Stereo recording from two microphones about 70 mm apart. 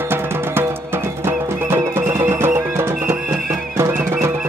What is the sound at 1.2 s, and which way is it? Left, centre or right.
Music, right.